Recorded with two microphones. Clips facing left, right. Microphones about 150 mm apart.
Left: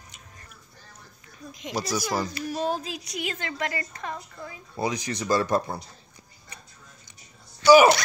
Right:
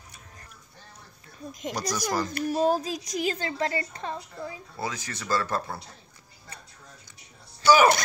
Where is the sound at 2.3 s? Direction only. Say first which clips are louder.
Right 4 dB; 45° right (ahead or behind).